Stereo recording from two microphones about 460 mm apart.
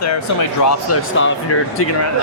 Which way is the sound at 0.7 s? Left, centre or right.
Left.